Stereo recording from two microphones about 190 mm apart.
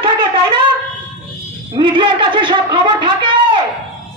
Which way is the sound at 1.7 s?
25° right (ahead or behind).